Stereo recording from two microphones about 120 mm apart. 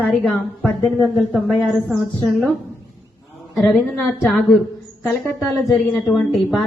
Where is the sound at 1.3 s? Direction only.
Centre (ahead or behind).